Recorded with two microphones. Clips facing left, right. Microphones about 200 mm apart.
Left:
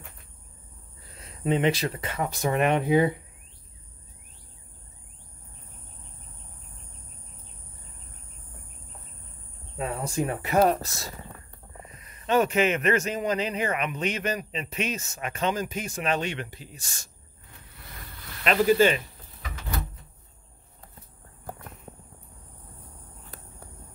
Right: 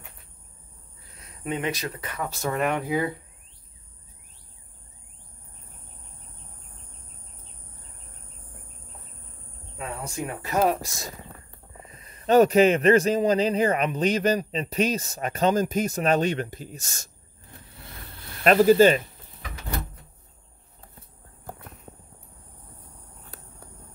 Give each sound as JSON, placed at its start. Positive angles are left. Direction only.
{"t": 1.2, "sound": "speech", "side_deg": 25}
{"t": 10.0, "sound": "speech", "side_deg": 30}
{"t": 10.5, "sound": "speech", "side_deg": 0}
{"t": 10.8, "sound": "speech", "side_deg": -15}
{"t": 11.8, "sound": "a man's voice", "side_deg": -30}
{"t": 18.4, "sound": "a man's voice", "side_deg": -45}